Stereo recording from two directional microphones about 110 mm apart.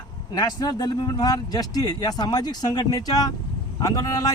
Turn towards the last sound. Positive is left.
turn(degrees=35)  # may be behind; listen again after turning